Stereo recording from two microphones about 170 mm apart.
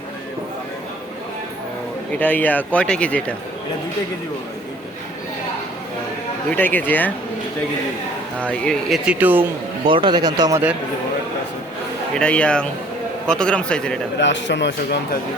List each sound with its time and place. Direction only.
2.1 s speech: 10° left (ahead or behind)
6.5 s speech: 10° left (ahead or behind)
8.6 s speech: 5° right (ahead or behind)
9.8 s speech: 30° right (ahead or behind)
12.1 s a man's voice: 5° left (ahead or behind)
14.2 s a man's voice: 90° left